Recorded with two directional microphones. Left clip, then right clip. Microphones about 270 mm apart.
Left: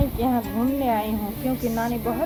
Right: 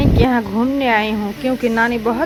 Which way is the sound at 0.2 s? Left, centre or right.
Right.